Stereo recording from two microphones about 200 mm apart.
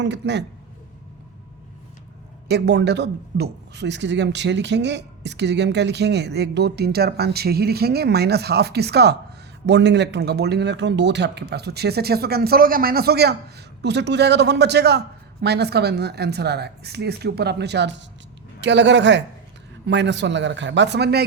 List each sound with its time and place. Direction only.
0.0 s speech: 60° right (ahead or behind)
2.5 s speech: 55° right (ahead or behind)